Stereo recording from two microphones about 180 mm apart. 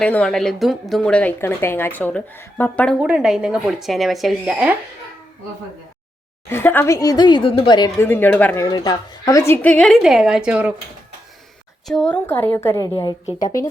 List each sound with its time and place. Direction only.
0.0 s a woman's voice: 5° left (ahead or behind)
3.0 s speech: 5° right (ahead or behind)
6.5 s a woman's voice: 10° left (ahead or behind); by 7.9 s 25° left (ahead or behind)
7.9 s a woman's voice: 10° left (ahead or behind)
8.6 s speech: 25° left (ahead or behind); by 10.8 s 10° right (ahead or behind)
11.9 s a woman's voice: 5° left (ahead or behind)